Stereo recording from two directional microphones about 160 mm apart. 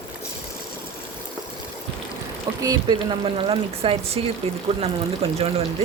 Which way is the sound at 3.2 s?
35° right (ahead or behind).